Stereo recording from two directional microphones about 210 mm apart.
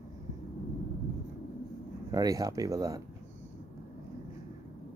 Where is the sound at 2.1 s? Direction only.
15° right (ahead or behind).